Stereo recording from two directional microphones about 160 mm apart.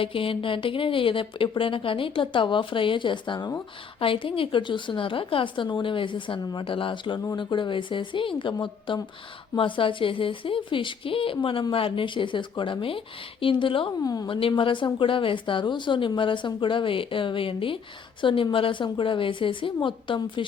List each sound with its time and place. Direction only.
0.0 s a woman's voice: 35° left (ahead or behind)
14.0 s a woman's voice: 25° left (ahead or behind)